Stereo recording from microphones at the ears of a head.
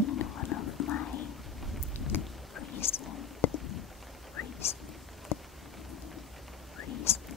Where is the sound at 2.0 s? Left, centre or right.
Left.